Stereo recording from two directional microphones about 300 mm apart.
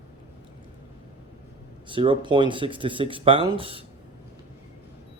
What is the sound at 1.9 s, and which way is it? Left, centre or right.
Speech, centre.